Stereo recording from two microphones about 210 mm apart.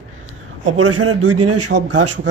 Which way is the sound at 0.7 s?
90° right.